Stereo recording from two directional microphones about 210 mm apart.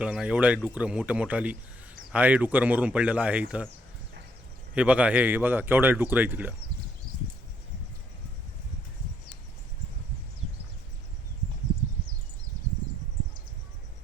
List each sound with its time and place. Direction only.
0.0 s speech: 5° right (ahead or behind)
4.7 s speech: 5° right (ahead or behind)